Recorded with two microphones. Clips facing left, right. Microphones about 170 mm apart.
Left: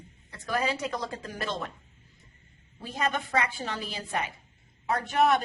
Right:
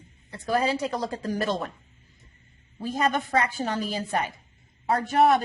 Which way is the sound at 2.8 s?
40° right (ahead or behind).